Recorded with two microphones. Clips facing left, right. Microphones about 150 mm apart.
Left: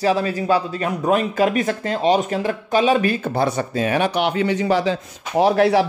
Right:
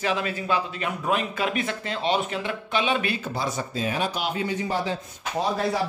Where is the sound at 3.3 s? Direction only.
65° left (ahead or behind); by 4.9 s 90° left.